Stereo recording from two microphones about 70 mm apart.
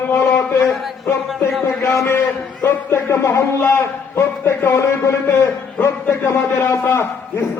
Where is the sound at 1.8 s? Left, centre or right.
Left.